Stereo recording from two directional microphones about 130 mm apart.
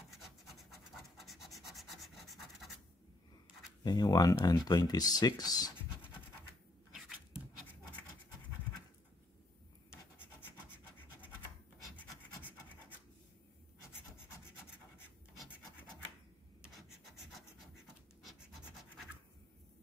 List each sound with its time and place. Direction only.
1.1 s rub: centre (ahead or behind)
3.8 s speech: 30° left (ahead or behind)